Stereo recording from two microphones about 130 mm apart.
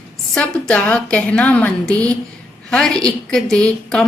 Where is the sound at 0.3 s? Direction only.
10° left (ahead or behind).